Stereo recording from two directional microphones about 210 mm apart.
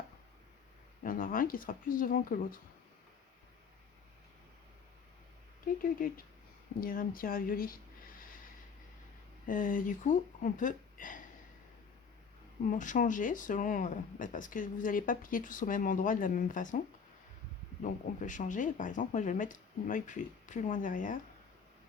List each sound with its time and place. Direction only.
1.0 s speech: 40° left (ahead or behind)
6.7 s speech: 45° left (ahead or behind)
9.5 s speech: 40° left (ahead or behind)
12.6 s speech: 40° left (ahead or behind)
17.8 s speech: 35° left (ahead or behind)